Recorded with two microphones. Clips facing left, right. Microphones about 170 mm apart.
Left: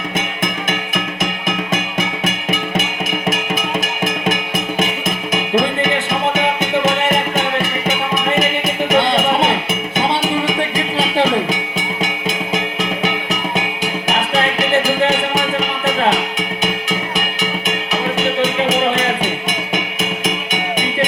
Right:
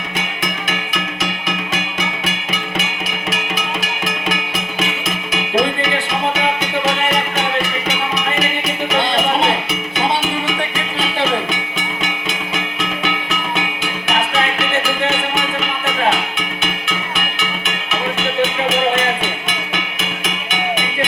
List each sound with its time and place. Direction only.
0.4 s music: 50° left (ahead or behind)
12.5 s music: 40° left (ahead or behind)
14.3 s music: 35° left (ahead or behind)
16.9 s music: 40° left (ahead or behind)